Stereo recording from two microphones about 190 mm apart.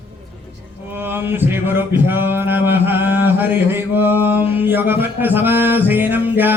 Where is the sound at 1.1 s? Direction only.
10° right (ahead or behind).